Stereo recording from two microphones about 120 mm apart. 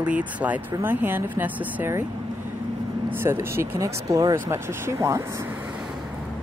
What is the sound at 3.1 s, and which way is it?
Speech, 20° right (ahead or behind).